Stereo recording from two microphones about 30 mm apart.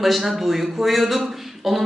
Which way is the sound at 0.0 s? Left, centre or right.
Centre.